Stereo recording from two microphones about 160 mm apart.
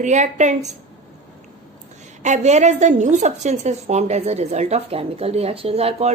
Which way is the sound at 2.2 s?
45° right (ahead or behind).